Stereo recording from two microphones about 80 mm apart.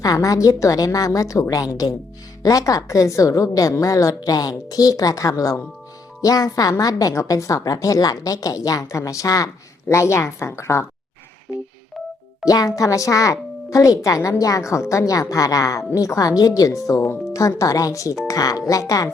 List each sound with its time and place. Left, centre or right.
0.0 s speech: left
6.2 s speech: left
11.5 s telephone dialing: centre
12.5 s speech: left